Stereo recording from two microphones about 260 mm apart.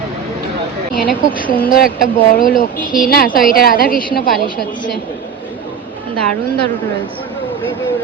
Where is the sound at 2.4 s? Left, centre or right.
Left.